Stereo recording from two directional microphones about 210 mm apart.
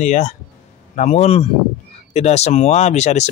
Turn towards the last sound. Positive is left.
turn(degrees=30)  # may be behind; listen again after turning